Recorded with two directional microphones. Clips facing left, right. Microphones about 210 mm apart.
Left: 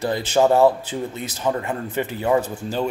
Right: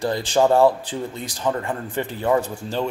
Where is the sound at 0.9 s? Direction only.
20° left (ahead or behind).